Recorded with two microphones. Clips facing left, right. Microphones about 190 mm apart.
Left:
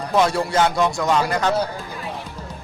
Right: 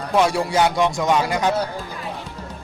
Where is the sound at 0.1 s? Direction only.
10° right (ahead or behind).